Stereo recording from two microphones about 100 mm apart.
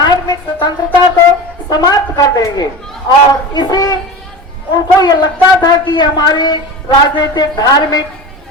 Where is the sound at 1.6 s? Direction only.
40° left (ahead or behind).